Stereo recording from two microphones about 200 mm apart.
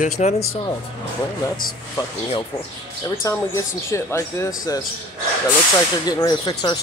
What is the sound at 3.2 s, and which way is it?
Speech, 15° left (ahead or behind).